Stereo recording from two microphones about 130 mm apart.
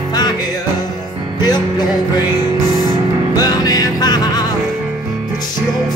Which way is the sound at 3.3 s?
30° left (ahead or behind).